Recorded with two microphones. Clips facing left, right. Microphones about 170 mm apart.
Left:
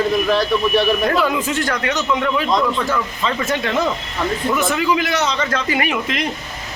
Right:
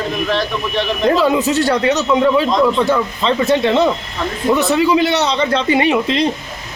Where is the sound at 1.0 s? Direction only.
25° right (ahead or behind).